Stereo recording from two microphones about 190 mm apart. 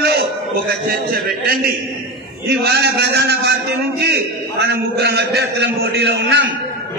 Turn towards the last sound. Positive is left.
turn(degrees=-65)  # may be behind; listen again after turning